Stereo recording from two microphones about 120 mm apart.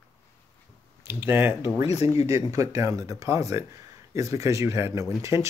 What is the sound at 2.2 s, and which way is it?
Speech, 25° right (ahead or behind).